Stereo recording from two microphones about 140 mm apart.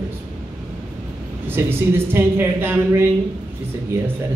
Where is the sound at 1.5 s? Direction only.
15° right (ahead or behind).